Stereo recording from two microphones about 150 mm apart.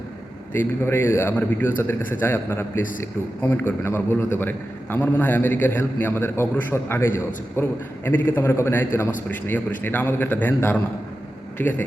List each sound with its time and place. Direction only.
0.5 s a man's voice: 15° left (ahead or behind)